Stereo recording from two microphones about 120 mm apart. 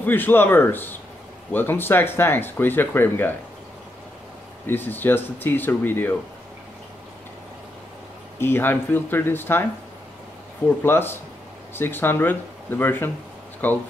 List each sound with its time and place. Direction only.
0.0 s speech: 15° left (ahead or behind)
4.6 s speech: 15° left (ahead or behind)
8.4 s speech: 20° left (ahead or behind)
10.8 s speech: 20° left (ahead or behind)